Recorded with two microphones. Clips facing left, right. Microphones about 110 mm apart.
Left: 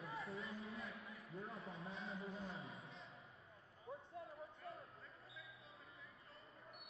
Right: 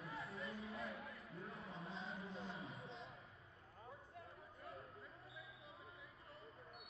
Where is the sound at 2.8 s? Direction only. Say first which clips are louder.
Right 4 dB; 30° right (ahead or behind).